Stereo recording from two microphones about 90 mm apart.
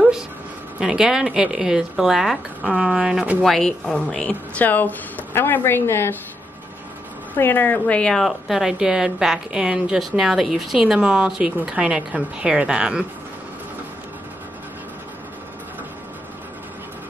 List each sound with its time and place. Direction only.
0.7 s speech: 5° right (ahead or behind)
3.4 s speech: 5° left (ahead or behind); by 6.1 s 25° left (ahead or behind)
7.3 s a woman's voice: 20° left (ahead or behind); by 13.0 s 10° right (ahead or behind)